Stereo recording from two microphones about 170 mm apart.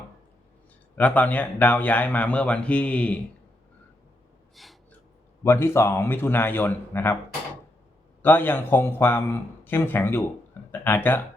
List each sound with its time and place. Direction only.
0.9 s speech: 10° left (ahead or behind)
4.5 s gasp: centre (ahead or behind)
5.4 s speech: 15° left (ahead or behind)
8.2 s speech: 10° left (ahead or behind)